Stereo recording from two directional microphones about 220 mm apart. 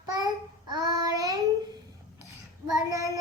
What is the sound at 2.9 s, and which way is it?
Child singing, 15° right (ahead or behind).